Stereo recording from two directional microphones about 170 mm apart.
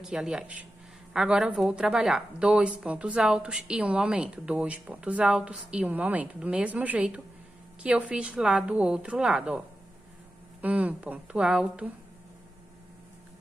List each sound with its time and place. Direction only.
0.0 s a woman's voice: 5° right (ahead or behind)